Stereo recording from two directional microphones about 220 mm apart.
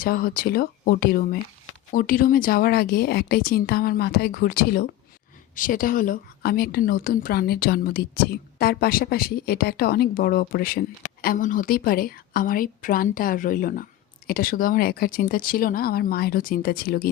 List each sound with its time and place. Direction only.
0.0 s a woman's voice: 40° left (ahead or behind)